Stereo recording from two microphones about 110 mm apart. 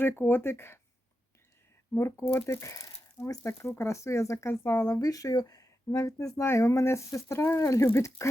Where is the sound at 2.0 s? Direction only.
25° left (ahead or behind).